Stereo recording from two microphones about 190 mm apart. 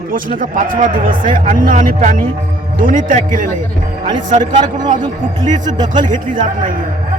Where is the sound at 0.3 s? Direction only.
45° right (ahead or behind).